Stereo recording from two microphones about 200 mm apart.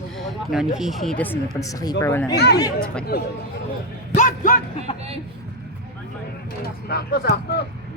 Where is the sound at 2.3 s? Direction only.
55° left (ahead or behind).